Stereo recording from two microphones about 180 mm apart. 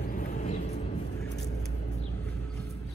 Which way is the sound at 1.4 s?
70° left (ahead or behind).